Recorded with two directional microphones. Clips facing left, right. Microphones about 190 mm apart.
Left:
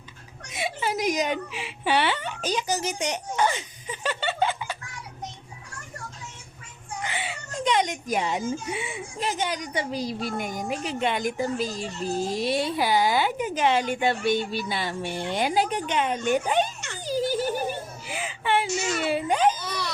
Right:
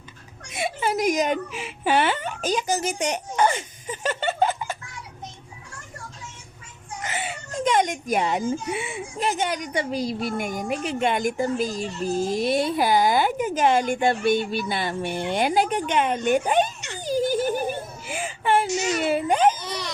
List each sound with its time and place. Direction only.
0.5 s speech: 50° right (ahead or behind)
7.0 s speech: 45° right (ahead or behind)
17.0 s giggle: 50° right (ahead or behind)
18.7 s speech: 15° right (ahead or behind)
18.9 s speech: 50° right (ahead or behind)